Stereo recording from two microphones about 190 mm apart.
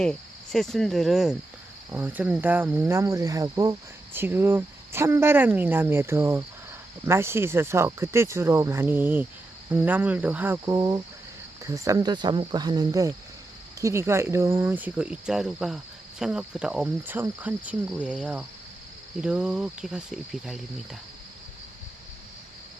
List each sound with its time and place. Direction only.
0.0 s cricket: 5° left (ahead or behind)
1.9 s speech: 10° right (ahead or behind)
19.2 s cricket: 5° right (ahead or behind)